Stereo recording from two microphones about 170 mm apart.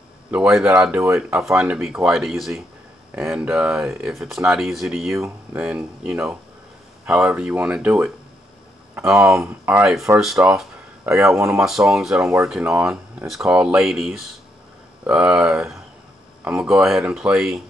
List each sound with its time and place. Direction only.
0.3 s speech: 5° right (ahead or behind)
9.3 s speech: 10° right (ahead or behind)
10.2 s speech: centre (ahead or behind)
11.3 s speech: 15° right (ahead or behind)
11.6 s speech: 5° right (ahead or behind)